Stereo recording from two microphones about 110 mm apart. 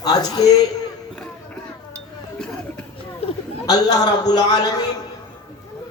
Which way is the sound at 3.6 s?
35° left (ahead or behind).